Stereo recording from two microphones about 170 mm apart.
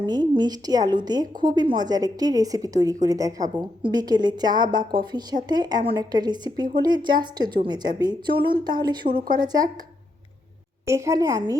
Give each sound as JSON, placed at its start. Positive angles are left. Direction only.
{"t": 0.0, "sound": "a woman's voice", "side_deg": -25}
{"t": 10.8, "sound": "a woman's voice", "side_deg": -15}